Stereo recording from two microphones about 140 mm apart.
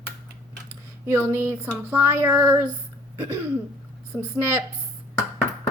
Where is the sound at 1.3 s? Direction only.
15° right (ahead or behind).